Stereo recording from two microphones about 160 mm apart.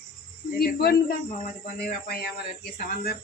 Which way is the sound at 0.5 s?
75° left (ahead or behind).